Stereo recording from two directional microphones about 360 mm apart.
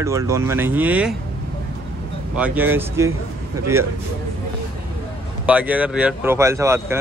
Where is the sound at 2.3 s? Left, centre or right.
Centre.